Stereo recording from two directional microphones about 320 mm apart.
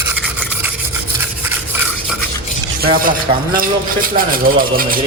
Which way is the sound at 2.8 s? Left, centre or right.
Right.